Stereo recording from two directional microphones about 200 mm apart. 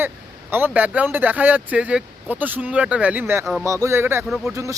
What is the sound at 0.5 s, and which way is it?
Speech, 10° right (ahead or behind).